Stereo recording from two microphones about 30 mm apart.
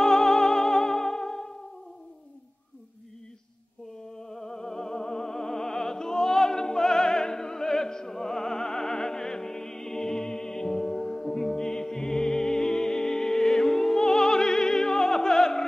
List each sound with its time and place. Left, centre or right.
0.0 s music: left
4.2 s music: centre